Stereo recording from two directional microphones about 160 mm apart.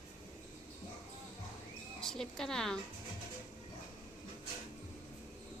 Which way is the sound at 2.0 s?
5° left (ahead or behind).